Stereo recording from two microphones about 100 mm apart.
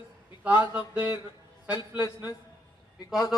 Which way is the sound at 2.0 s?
40° left (ahead or behind).